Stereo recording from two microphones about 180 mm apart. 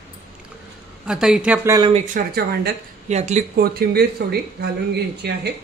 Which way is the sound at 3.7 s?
60° right (ahead or behind).